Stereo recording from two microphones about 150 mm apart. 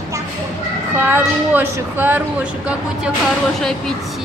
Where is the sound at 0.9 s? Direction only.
15° right (ahead or behind).